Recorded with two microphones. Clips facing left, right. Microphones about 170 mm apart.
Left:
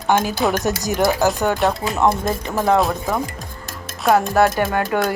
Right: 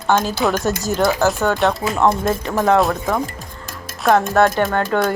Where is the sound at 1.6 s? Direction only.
5° left (ahead or behind).